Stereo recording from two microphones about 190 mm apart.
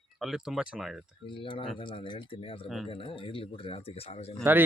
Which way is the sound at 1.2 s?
25° left (ahead or behind).